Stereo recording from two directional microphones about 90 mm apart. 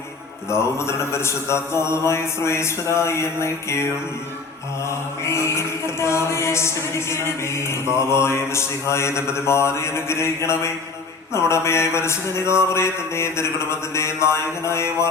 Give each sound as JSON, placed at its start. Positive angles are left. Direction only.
{"t": 0.5, "sound": "chant", "side_deg": 30}
{"t": 4.9, "sound": "chant", "side_deg": 30}